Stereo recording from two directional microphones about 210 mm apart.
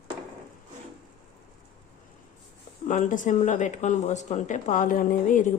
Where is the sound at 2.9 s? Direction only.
35° left (ahead or behind).